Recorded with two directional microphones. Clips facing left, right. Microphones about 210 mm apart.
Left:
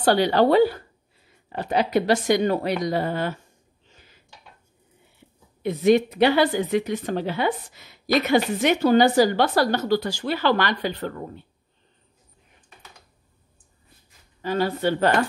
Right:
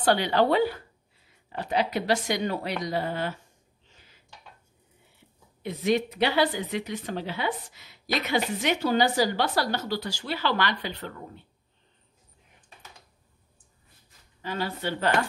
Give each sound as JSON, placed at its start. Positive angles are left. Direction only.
{"t": 0.0, "sound": "a woman's voice", "side_deg": 40}
{"t": 1.6, "sound": "speech", "side_deg": 50}
{"t": 5.6, "sound": "speech", "side_deg": 50}
{"t": 14.4, "sound": "speech", "side_deg": 45}